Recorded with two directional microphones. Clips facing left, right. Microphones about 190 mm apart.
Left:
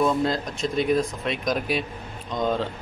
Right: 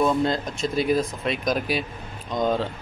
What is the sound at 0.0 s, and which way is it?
Speech, centre (ahead or behind).